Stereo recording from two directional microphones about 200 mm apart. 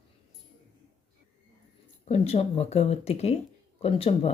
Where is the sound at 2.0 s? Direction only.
30° left (ahead or behind).